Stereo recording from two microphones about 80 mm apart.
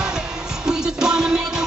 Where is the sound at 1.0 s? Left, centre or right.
Centre.